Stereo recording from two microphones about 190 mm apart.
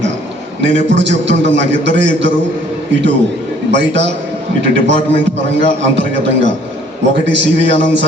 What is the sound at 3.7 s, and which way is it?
Speech, 70° right (ahead or behind).